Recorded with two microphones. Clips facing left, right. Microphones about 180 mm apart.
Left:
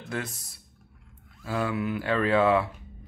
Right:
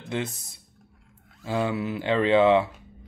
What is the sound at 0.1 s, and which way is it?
Speech, 20° right (ahead or behind).